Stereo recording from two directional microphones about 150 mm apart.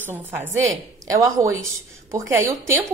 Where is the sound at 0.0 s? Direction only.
10° right (ahead or behind).